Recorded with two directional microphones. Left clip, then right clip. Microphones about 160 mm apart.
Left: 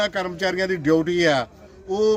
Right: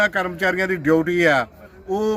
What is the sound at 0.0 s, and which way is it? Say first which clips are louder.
Speech: right 4 dB; 15° left (ahead or behind).